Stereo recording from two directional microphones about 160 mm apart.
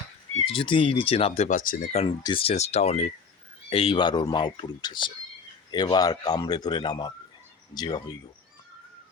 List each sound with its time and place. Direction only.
0.4 s speech: 35° left (ahead or behind)
1.5 s speech: 55° left (ahead or behind)
1.9 s speech: 40° left (ahead or behind)